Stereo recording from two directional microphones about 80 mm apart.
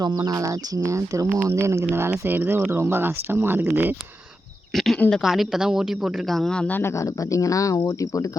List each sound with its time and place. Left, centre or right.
0.2 s speech: right
4.7 s a sound: centre
4.9 s a woman's voice: centre
5.2 s speech: centre
6.7 s speech: left
6.9 s speech: left